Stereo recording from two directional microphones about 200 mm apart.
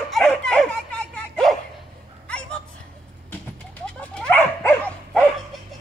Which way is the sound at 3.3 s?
5° left (ahead or behind).